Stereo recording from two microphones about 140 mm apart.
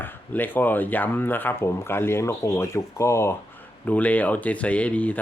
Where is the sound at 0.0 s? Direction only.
15° left (ahead or behind).